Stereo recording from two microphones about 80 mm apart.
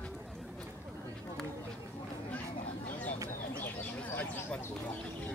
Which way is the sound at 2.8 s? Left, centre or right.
Centre.